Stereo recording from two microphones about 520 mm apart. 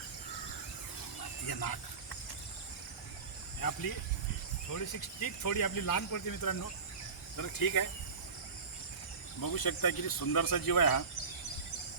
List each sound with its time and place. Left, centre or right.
1.5 s speech: left
3.6 s speech: left
9.4 s speech: left